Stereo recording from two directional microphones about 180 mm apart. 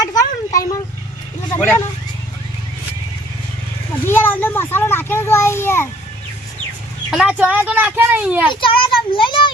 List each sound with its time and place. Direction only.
0.0 s vehicle: 20° left (ahead or behind)
1.5 s speech: 10° left (ahead or behind)
4.0 s a sound: 10° left (ahead or behind)
7.1 s speech: 5° right (ahead or behind)
8.4 s a child's voice: 30° left (ahead or behind)